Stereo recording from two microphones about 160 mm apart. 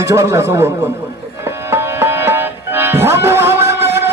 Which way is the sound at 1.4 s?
15° right (ahead or behind).